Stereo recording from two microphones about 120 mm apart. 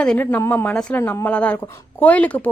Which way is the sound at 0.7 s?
5° left (ahead or behind).